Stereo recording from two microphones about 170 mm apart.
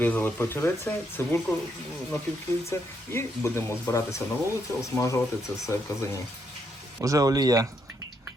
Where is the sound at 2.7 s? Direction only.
15° left (ahead or behind).